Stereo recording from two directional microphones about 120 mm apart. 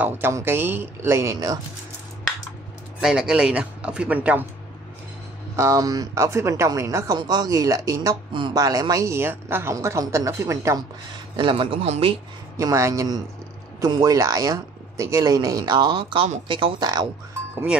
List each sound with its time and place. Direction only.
0.0 s speech: 20° right (ahead or behind)
3.0 s speech: 5° right (ahead or behind)
5.6 s speech: 30° right (ahead or behind)
8.3 s speech: 45° right (ahead or behind)
8.5 s speech: 30° right (ahead or behind)
11.3 s speech: 45° right (ahead or behind)
11.8 s speech: 60° right (ahead or behind)
12.5 s speech: 25° right (ahead or behind)